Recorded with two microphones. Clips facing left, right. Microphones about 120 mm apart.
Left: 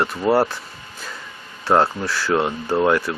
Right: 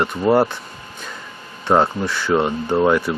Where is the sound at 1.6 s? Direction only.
Centre (ahead or behind).